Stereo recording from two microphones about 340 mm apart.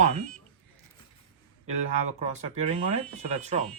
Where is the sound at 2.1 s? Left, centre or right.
Centre.